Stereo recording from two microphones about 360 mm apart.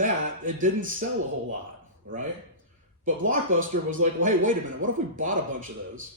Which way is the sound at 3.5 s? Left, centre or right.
Right.